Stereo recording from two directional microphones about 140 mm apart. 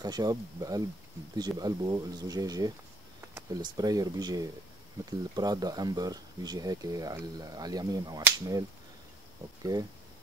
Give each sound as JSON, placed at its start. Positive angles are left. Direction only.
{"t": 0.0, "sound": "speech", "side_deg": -30}